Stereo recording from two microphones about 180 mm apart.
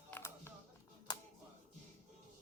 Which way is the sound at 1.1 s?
25° left (ahead or behind).